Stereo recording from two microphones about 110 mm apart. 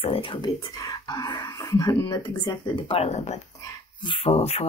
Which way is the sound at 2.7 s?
65° left (ahead or behind).